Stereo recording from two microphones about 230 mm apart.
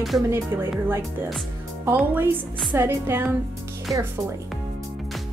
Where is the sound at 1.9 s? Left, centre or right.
Centre.